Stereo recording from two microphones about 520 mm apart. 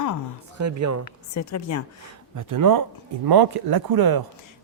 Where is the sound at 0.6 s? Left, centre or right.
Right.